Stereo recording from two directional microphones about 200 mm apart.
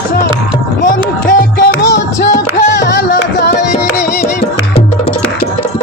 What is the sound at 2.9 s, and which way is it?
Music, 50° left (ahead or behind).